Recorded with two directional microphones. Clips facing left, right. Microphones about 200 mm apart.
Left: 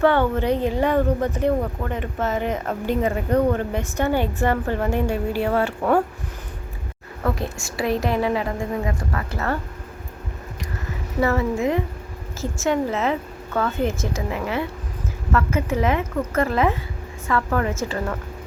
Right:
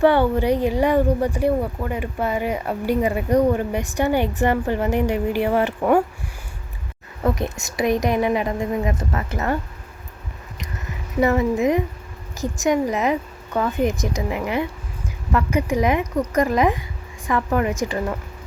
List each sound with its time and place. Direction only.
0.0 s speech: 10° right (ahead or behind)
7.3 s a woman's voice: 20° right (ahead or behind)
11.2 s speech: 15° right (ahead or behind)